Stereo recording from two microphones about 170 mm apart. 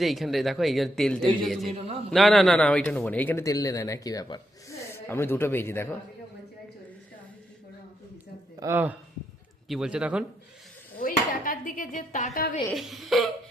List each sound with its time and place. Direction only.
0.0 s a man's voice: centre (ahead or behind)
8.5 s speech: 15° right (ahead or behind)
10.9 s speech: 55° left (ahead or behind)
12.7 s speech: centre (ahead or behind)